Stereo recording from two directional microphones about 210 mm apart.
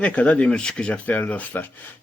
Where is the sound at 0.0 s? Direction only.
5° left (ahead or behind).